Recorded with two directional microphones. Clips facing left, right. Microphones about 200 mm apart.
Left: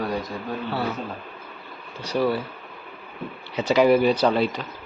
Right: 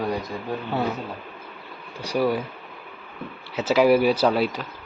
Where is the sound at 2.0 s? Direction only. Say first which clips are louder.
Even; 10° right (ahead or behind).